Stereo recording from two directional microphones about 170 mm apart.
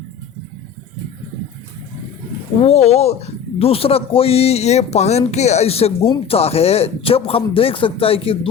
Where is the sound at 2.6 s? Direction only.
35° left (ahead or behind).